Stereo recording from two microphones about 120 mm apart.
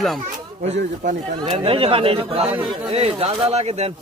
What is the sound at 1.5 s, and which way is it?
Speech, 50° right (ahead or behind).